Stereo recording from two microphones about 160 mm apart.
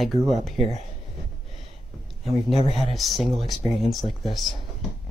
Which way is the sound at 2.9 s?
Centre (ahead or behind).